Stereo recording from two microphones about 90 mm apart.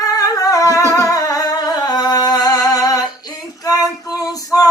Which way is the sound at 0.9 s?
40° left (ahead or behind).